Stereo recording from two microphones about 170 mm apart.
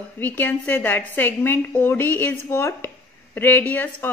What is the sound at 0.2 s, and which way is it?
A woman's voice, 10° left (ahead or behind).